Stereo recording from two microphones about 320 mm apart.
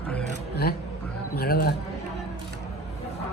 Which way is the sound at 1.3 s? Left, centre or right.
Left.